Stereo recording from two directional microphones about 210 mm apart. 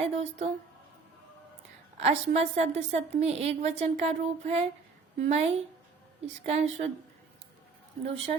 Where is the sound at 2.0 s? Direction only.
30° right (ahead or behind).